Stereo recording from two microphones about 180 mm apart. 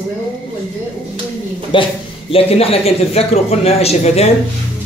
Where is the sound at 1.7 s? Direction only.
25° left (ahead or behind).